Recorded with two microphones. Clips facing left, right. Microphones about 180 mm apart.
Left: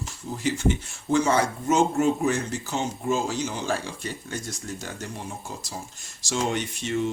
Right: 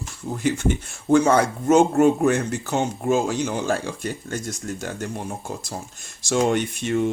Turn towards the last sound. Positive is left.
turn(degrees=-55)  # may be behind; listen again after turning